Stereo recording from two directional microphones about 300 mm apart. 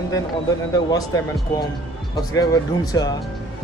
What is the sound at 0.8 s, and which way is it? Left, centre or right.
Speech, centre.